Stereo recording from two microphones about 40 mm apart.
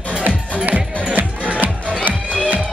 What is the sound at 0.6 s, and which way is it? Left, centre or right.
Music, right.